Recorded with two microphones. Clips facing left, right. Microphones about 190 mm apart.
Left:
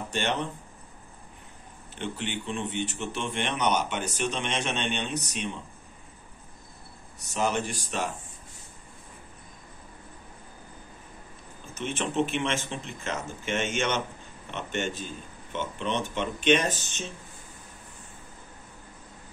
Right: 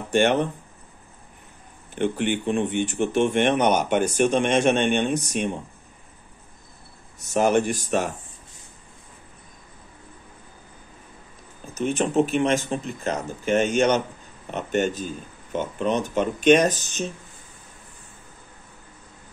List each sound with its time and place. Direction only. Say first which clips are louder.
0.1 s speech: right 11 dB; 50° right (ahead or behind)
2.0 s speech: right 10 dB; 50° right (ahead or behind)
7.3 s speech: right 8 dB; 50° right (ahead or behind)
11.7 s speech: right 8 dB; 40° right (ahead or behind)